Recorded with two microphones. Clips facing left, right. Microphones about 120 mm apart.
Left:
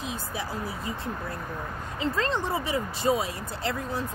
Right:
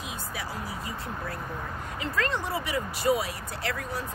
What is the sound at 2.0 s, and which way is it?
Speech, 30° left (ahead or behind).